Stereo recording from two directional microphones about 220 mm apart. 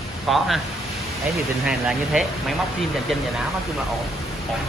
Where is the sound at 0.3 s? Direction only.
Centre (ahead or behind).